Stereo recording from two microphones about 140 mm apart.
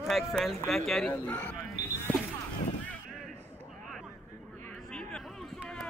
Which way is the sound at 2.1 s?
10° left (ahead or behind).